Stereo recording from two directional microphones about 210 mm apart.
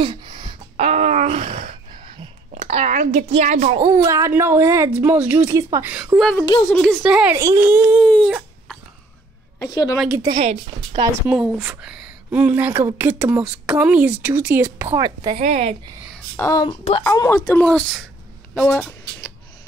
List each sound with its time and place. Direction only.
0.0 s a sound: 25° right (ahead or behind)
3.8 s speech: 15° right (ahead or behind)
7.3 s speech: 15° right (ahead or behind)
8.0 s dog: 5° left (ahead or behind)
9.6 s a woman's voice: 15° left (ahead or behind)
9.9 s speech: 5° right (ahead or behind)
10.3 s speech: 30° right (ahead or behind)
11.2 s a woman's voice: 5° right (ahead or behind)
15.3 s speech: 30° right (ahead or behind)
16.3 s speech: 15° left (ahead or behind)
18.5 s a sound: 5° left (ahead or behind)